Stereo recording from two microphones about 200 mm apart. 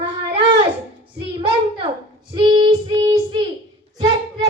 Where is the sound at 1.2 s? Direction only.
25° right (ahead or behind).